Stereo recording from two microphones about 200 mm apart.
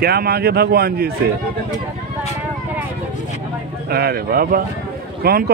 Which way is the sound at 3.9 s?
50° right (ahead or behind).